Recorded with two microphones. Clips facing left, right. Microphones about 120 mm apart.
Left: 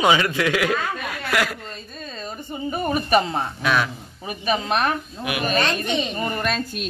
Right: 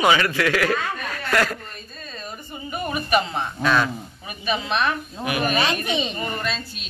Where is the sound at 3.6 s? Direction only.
5° left (ahead or behind).